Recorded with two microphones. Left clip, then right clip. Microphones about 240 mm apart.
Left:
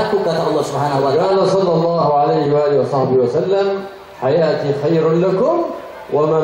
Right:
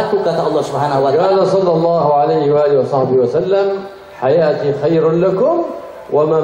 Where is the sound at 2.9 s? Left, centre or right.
Left.